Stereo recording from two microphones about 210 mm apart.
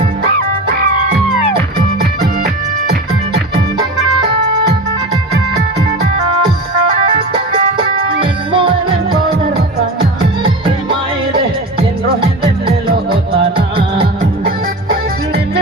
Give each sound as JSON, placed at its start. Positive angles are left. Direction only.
{"t": 2.0, "sound": "music", "side_deg": -50}
{"t": 8.2, "sound": "music", "side_deg": -25}
{"t": 13.4, "sound": "music", "side_deg": -25}